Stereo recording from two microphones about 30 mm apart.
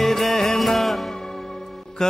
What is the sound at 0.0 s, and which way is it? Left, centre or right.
Music, centre.